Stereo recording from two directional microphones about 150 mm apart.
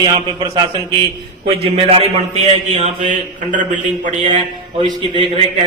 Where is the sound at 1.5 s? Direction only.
40° right (ahead or behind); by 3.6 s 55° right (ahead or behind).